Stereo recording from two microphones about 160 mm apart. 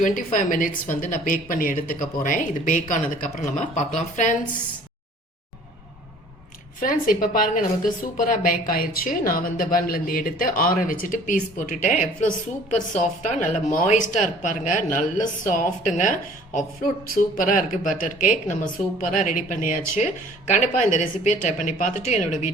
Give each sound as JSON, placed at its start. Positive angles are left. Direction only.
{"t": 0.0, "sound": "a woman's voice", "side_deg": 55}
{"t": 6.7, "sound": "a woman's voice", "side_deg": 55}